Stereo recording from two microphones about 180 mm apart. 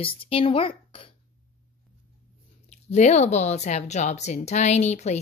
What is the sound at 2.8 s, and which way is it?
Speech, 40° left (ahead or behind).